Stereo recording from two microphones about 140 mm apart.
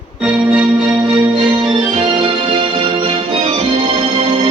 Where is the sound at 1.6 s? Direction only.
35° right (ahead or behind); by 4.4 s 50° right (ahead or behind).